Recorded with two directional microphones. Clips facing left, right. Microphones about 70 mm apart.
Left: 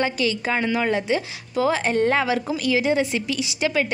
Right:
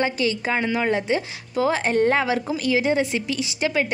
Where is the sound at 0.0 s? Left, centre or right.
Right.